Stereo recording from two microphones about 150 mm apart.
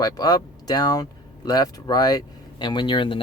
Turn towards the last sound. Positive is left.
turn(degrees=35)  # may be behind; listen again after turning